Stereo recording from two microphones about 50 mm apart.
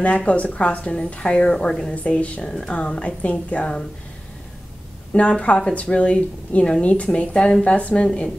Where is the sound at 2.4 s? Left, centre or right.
Centre.